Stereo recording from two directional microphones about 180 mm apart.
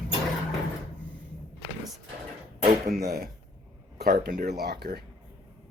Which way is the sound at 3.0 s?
60° right (ahead or behind).